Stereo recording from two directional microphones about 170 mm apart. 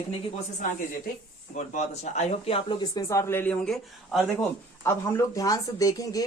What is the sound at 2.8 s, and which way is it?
Speech, 20° left (ahead or behind).